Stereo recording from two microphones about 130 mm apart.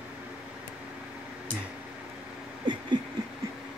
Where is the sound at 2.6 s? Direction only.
35° right (ahead or behind).